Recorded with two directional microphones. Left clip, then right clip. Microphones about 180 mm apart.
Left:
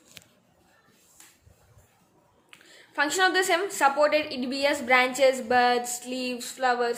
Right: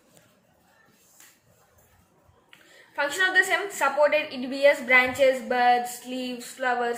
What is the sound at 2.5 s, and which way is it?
A woman's voice, 65° left (ahead or behind).